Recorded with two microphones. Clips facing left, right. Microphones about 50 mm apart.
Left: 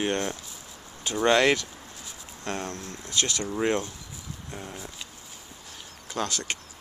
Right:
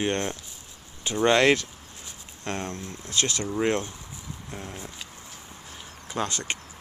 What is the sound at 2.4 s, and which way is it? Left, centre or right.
Speech, right.